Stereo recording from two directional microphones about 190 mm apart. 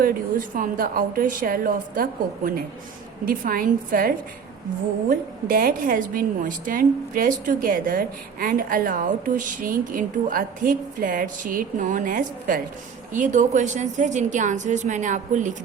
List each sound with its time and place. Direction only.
0.0 s a woman's voice: 45° right (ahead or behind)